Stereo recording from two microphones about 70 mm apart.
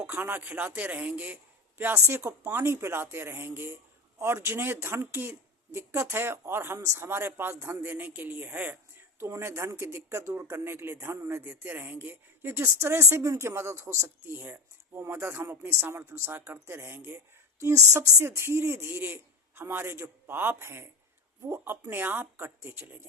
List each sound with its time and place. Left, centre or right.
0.1 s speech: right
2.0 s a man's voice: right
9.4 s a man's voice: right
17.6 s a man's voice: right